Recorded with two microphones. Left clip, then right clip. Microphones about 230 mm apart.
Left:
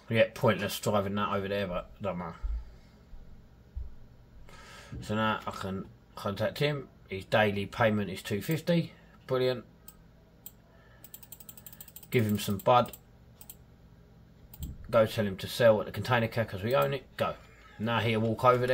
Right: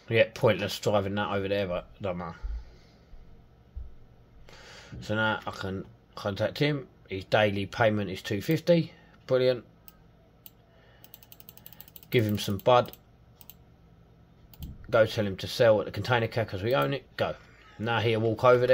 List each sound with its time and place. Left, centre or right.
0.1 s speech: right
4.5 s speech: right
12.1 s speech: right
14.9 s speech: right